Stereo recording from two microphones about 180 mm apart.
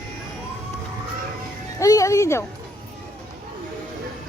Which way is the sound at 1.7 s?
20° left (ahead or behind).